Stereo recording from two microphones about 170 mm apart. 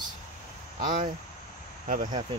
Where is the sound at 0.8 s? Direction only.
50° right (ahead or behind).